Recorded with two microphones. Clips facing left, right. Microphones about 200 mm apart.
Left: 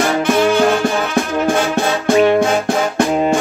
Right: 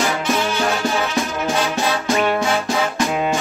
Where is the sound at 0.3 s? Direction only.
55° left (ahead or behind).